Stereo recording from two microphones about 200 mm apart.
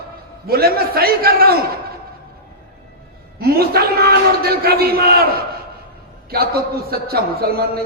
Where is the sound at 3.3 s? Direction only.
50° right (ahead or behind).